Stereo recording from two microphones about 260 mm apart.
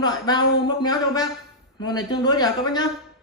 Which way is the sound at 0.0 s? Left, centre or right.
Centre.